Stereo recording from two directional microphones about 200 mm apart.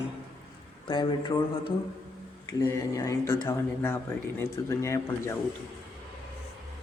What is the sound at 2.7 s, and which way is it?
Speech, 15° left (ahead or behind).